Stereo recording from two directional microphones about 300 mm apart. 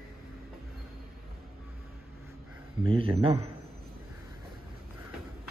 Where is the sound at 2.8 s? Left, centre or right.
Centre.